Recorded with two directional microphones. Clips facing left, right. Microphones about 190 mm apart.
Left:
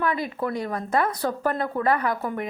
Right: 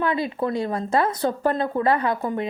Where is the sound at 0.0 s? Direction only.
25° right (ahead or behind).